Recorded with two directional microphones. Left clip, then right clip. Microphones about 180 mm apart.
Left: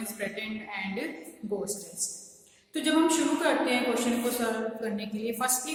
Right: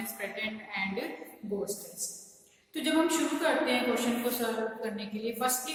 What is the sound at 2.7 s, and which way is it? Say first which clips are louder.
A woman's voice: left 3 dB; 20° left (ahead or behind).